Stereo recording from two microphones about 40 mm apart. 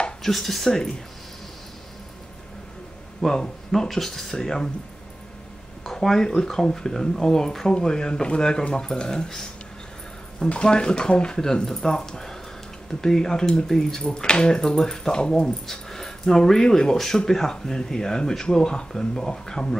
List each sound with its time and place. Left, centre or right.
0.2 s speech: centre
3.2 s speech: centre
5.9 s speech: centre
15.6 s speech: centre
16.9 s speech: centre